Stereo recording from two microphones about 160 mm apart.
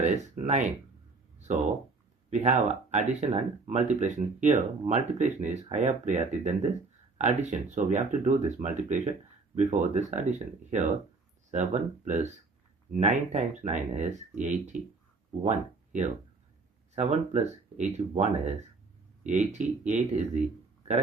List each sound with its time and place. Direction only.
0.0 s speech: 45° right (ahead or behind)
2.4 s speech: 45° right (ahead or behind)